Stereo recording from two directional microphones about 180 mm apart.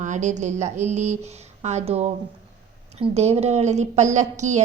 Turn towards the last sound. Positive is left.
turn(degrees=-40)  # may be behind; listen again after turning